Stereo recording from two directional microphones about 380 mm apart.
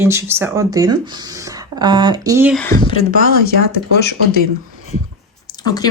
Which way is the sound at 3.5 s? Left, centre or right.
Left.